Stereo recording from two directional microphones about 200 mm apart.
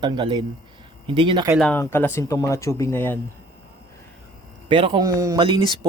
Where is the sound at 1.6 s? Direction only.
5° left (ahead or behind).